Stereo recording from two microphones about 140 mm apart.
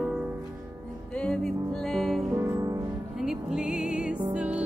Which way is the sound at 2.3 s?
20° right (ahead or behind).